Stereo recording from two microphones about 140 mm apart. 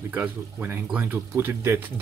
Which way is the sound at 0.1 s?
15° right (ahead or behind).